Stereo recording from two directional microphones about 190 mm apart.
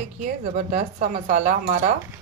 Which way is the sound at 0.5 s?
40° right (ahead or behind).